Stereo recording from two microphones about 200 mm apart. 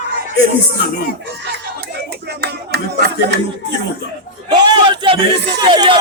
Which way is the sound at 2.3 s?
55° right (ahead or behind).